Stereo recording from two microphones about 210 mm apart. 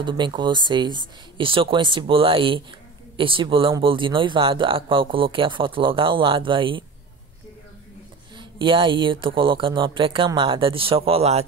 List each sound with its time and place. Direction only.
0.0 s speech: 20° right (ahead or behind)
8.4 s speech: 25° right (ahead or behind)